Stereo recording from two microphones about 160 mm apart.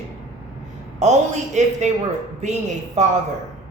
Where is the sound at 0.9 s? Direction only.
45° right (ahead or behind).